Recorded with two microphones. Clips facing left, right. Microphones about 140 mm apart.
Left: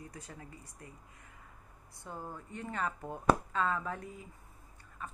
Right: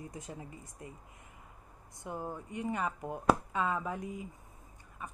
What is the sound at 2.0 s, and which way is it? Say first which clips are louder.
A woman's voice: right 4 dB; 15° right (ahead or behind).